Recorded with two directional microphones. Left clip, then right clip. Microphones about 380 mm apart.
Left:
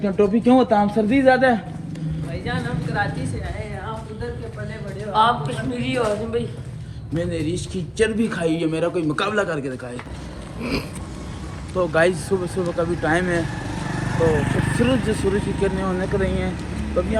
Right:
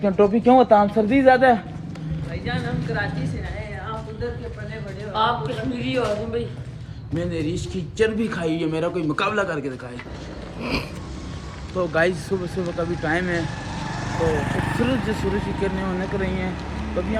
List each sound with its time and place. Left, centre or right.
0.0 s speech: centre
2.4 s a man's voice: centre
5.1 s a man's voice: centre
7.1 s a man's voice: centre
13.8 s speech: centre
15.1 s a man's voice: centre